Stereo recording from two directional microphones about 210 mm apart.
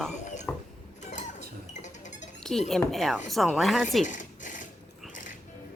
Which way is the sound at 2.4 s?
Centre (ahead or behind).